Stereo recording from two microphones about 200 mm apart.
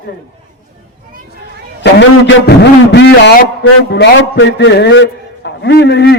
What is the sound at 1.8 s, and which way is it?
A man's voice, 60° left (ahead or behind).